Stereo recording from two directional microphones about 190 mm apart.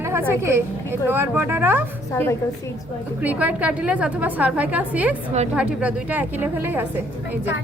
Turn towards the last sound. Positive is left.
turn(degrees=-10)  # may be behind; listen again after turning